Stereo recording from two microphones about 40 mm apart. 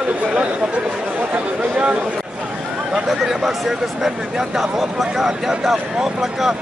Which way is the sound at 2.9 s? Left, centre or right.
Centre.